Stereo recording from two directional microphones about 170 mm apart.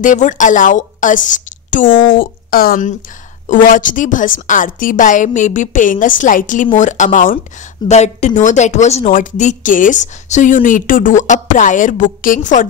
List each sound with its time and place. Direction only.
0.0 s a woman's voice: 45° left (ahead or behind)
2.1 s a woman's voice: 60° left (ahead or behind)